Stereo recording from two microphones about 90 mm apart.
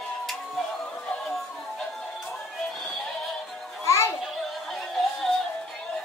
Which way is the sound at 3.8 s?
30° left (ahead or behind).